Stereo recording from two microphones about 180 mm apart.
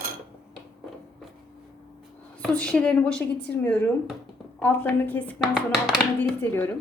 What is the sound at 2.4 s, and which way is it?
A woman's voice, 5° left (ahead or behind).